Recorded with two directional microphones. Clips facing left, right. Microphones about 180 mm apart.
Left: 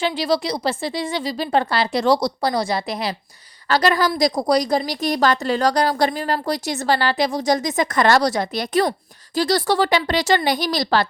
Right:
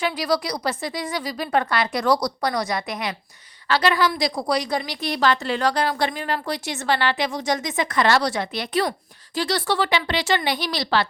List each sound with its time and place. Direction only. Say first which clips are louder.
0.0 s a woman's voice: left 3 dB; 25° left (ahead or behind); by 11.0 s 40° left (ahead or behind)